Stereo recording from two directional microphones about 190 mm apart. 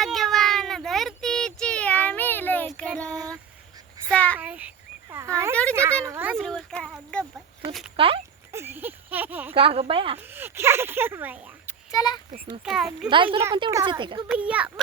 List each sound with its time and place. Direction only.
0.0 s a sound: centre (ahead or behind)
4.1 s a child's voice: 5° left (ahead or behind)
4.4 s speech: 10° right (ahead or behind)
6.4 s speech: 5° left (ahead or behind)
7.9 s speech: 30° right (ahead or behind)
8.5 s speech: 10° right (ahead or behind)
9.6 s speech: 30° right (ahead or behind)
10.3 s speech: 10° right (ahead or behind)
11.6 s a sound: 20° left (ahead or behind)
12.6 s speech: centre (ahead or behind)
13.1 s speech: 25° right (ahead or behind)
14.3 s speech: 5° right (ahead or behind)